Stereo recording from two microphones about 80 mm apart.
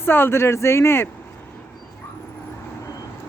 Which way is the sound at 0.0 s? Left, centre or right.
Left.